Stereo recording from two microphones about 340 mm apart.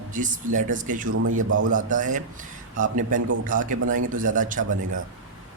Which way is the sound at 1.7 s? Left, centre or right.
Right.